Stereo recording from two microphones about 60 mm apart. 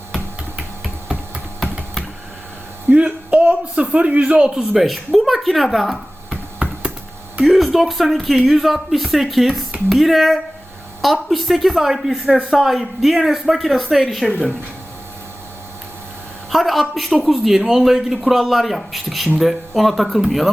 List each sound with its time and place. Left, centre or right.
2.9 s a sound: right
4.5 s speech: centre
6.6 s computer keyboard: right
7.4 s speech: centre
16.5 s a sound: centre
16.9 s speech: centre